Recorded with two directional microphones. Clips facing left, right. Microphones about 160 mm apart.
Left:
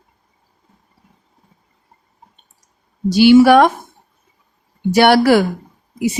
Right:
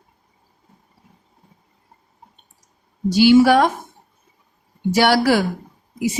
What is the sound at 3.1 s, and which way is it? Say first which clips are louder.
Speech: left 4 dB; 65° left (ahead or behind).